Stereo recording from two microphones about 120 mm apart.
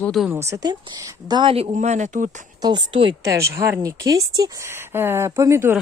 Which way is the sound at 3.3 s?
25° right (ahead or behind).